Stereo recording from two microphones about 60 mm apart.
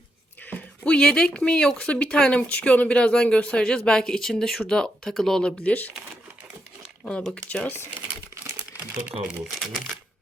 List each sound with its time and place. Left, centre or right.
0.5 s speech: centre
7.0 s speech: centre
8.7 s crumpling: right
9.2 s speech: centre